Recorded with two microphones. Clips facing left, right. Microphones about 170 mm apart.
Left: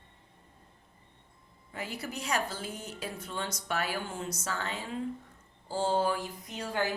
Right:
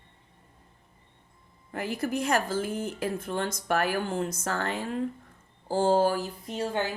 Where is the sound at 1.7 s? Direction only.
55° right (ahead or behind); by 6.8 s 30° right (ahead or behind).